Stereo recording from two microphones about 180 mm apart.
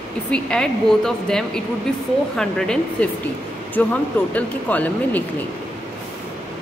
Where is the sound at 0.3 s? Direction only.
5° left (ahead or behind).